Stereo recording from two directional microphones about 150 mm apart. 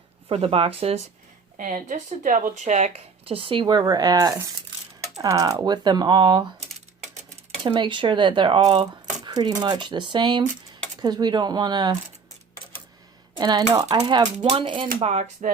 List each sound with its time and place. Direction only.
0.3 s speech: 40° right (ahead or behind)
1.5 s speech: 60° right (ahead or behind); by 6.4 s 30° right (ahead or behind)
7.6 s speech: 30° right (ahead or behind)
13.3 s speech: 25° right (ahead or behind)
14.9 s speech: 45° right (ahead or behind)